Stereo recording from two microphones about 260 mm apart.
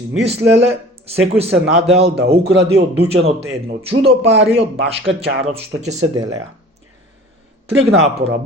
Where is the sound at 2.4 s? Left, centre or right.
Right.